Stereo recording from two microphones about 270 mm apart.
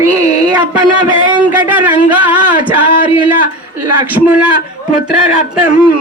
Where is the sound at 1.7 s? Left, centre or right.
Centre.